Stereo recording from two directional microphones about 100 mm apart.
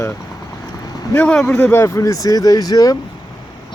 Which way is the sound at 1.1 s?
15° left (ahead or behind).